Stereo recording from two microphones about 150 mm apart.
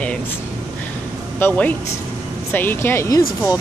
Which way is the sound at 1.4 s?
15° left (ahead or behind).